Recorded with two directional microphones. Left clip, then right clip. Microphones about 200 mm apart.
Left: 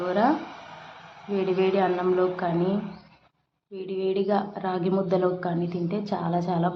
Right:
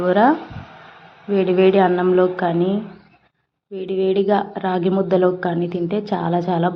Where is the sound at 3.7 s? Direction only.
25° right (ahead or behind).